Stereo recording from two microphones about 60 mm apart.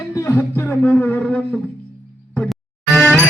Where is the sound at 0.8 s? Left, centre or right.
Left.